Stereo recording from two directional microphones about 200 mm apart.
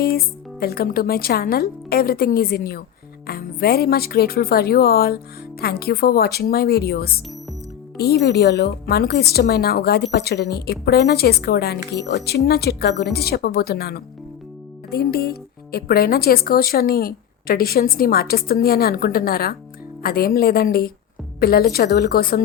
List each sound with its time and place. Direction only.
0.6 s speech: 50° left (ahead or behind)